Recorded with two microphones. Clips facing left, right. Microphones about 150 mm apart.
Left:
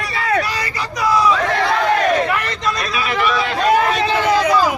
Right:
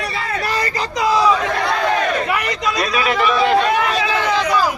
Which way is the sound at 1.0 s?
25° right (ahead or behind).